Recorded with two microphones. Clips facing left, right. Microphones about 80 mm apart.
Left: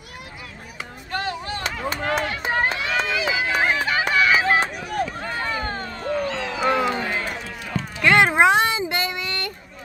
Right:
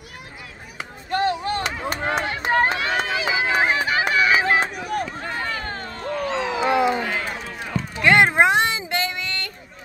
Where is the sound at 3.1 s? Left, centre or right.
Right.